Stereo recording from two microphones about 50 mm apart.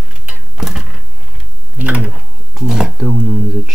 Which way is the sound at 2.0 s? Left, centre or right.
Centre.